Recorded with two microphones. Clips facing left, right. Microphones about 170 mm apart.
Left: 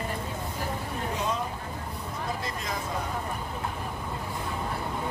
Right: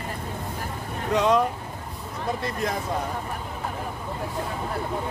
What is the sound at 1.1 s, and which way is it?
Vehicle, 75° right (ahead or behind).